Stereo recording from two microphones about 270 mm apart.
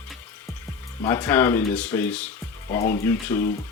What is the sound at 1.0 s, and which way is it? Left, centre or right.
Speech, centre.